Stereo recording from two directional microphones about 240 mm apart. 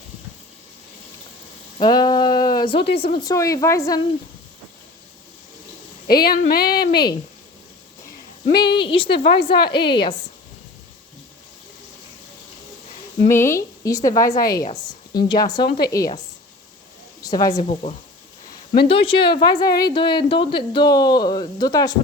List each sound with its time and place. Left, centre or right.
1.8 s a sound: centre
3.2 s a woman's voice: centre
6.1 s a woman's voice: left
8.5 s speech: centre
9.6 s a woman's voice: left
9.9 s speech: centre
13.2 s a woman's voice: centre
14.6 s a woman's voice: left
15.3 s a woman's voice: centre
17.2 s a woman's voice: centre